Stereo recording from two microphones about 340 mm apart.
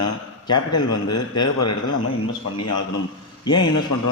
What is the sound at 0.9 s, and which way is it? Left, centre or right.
A man's voice, left.